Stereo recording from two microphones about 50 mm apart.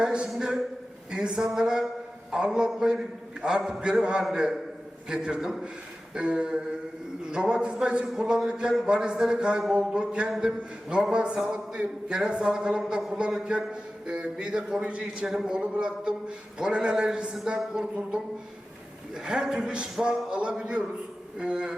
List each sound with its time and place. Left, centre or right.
0.0 s a man's voice: centre
19.1 s a man's voice: centre